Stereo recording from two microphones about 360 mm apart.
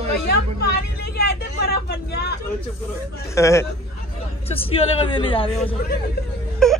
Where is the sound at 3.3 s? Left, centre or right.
Centre.